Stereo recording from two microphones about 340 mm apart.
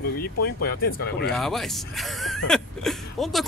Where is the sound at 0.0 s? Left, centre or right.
Left.